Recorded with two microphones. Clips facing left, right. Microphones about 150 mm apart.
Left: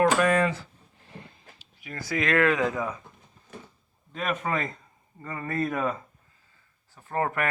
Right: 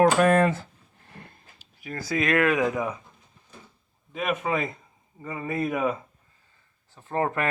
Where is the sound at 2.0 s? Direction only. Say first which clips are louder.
Right 1 dB; 25° right (ahead or behind).